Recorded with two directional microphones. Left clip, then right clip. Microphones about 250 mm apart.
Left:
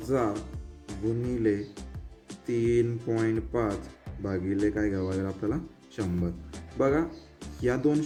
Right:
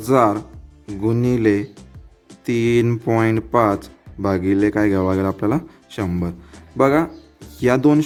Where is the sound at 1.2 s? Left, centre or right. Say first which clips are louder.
Right 11 dB; right.